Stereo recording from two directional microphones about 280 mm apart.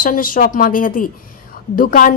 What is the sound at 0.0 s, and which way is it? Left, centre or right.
Speech, left.